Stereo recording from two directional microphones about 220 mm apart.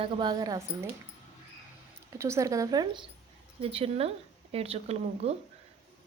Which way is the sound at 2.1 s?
10° right (ahead or behind).